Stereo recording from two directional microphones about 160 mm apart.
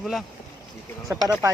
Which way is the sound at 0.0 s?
Centre (ahead or behind).